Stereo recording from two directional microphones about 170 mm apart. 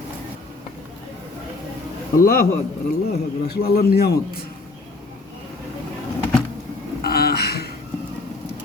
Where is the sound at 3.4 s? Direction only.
70° left (ahead or behind).